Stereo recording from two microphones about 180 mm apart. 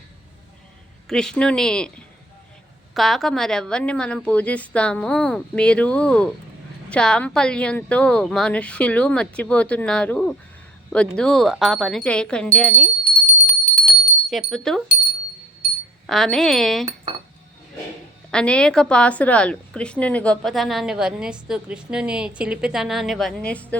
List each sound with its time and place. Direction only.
1.0 s a woman's voice: 5° left (ahead or behind)
13.2 s bell: 40° left (ahead or behind)
14.3 s a woman's voice: centre (ahead or behind)
16.0 s a woman's voice: centre (ahead or behind)
18.3 s a woman's voice: 5° left (ahead or behind)